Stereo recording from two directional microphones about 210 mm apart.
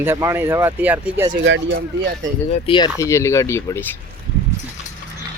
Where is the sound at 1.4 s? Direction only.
55° right (ahead or behind).